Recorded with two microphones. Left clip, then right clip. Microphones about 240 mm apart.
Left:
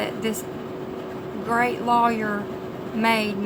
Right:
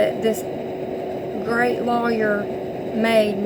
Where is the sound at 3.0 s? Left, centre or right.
Centre.